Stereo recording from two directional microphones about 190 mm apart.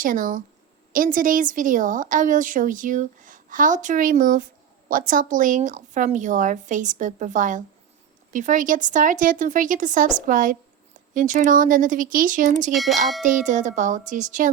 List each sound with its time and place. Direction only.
0.0 s a woman's voice: 45° right (ahead or behind)
12.7 s speech: centre (ahead or behind)
13.2 s a woman's voice: 40° right (ahead or behind)